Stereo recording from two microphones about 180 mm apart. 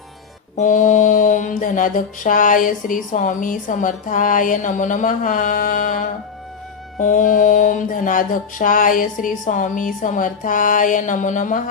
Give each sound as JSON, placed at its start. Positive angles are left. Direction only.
{"t": 0.5, "sound": "mantra", "side_deg": 45}